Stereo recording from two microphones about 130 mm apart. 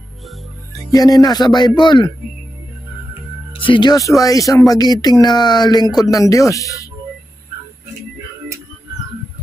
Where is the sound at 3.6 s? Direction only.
40° left (ahead or behind).